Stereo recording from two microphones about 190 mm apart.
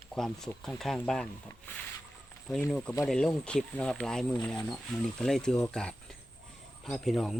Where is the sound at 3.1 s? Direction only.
5° left (ahead or behind).